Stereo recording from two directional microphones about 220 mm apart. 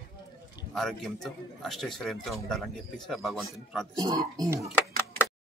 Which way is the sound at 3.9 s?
15° right (ahead or behind).